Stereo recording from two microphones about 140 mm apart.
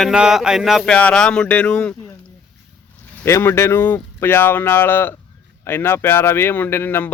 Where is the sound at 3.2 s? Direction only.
20° left (ahead or behind).